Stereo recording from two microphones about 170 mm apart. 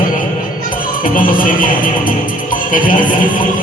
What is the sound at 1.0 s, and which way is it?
Music, 50° left (ahead or behind).